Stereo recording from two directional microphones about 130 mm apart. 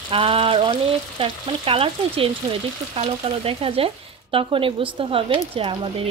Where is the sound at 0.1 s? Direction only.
45° right (ahead or behind).